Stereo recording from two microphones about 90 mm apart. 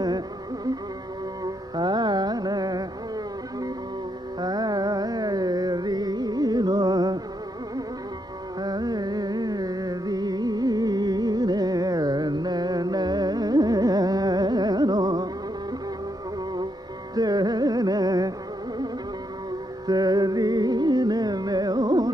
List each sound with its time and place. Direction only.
1.4 s carnatic music: 50° right (ahead or behind)
4.4 s carnatic music: 50° right (ahead or behind)
8.5 s carnatic music: 50° right (ahead or behind)
17.1 s music: 45° right (ahead or behind)
19.9 s music: 45° right (ahead or behind)